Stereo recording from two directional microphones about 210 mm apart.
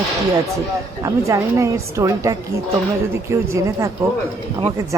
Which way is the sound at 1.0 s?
15° right (ahead or behind).